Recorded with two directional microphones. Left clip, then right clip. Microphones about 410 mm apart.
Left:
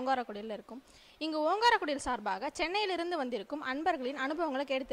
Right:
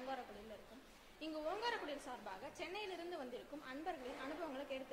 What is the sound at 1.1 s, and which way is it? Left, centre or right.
A woman's voice, left.